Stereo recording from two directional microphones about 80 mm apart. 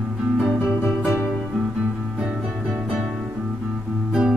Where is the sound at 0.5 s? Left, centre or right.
Centre.